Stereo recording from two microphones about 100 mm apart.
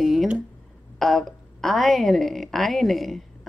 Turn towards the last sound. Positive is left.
turn(degrees=0)  # may be behind; listen again after turning